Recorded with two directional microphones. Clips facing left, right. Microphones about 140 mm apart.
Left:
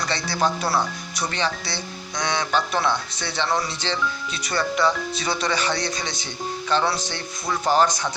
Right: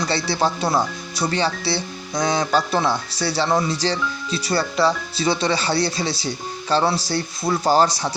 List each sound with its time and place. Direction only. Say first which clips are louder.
0.1 s speech: right 1 dB; 30° right (ahead or behind)